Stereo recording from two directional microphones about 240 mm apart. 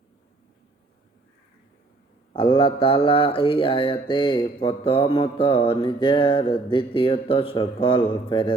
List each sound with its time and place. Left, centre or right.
2.3 s mantra: left